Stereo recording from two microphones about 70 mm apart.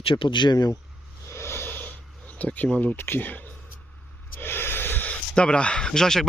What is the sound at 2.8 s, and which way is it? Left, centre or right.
Speech, left.